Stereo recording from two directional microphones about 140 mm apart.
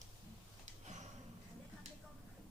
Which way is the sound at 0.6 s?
60° right (ahead or behind).